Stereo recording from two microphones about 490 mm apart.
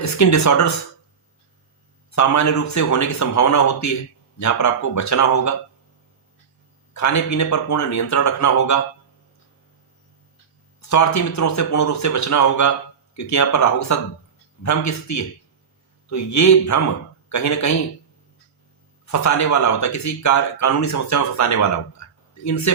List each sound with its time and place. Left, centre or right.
0.0 s speech: left
2.0 s speech: left
6.9 s speech: left
10.8 s speech: left
19.0 s speech: left